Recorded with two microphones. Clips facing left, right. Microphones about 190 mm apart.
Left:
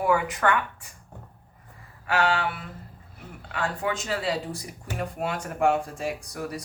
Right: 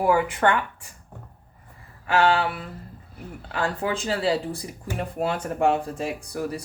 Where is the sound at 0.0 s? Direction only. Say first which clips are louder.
Right 3 dB; 30° right (ahead or behind).